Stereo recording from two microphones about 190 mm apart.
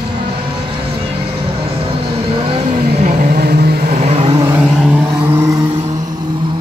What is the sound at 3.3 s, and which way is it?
Vehicle, 55° right (ahead or behind).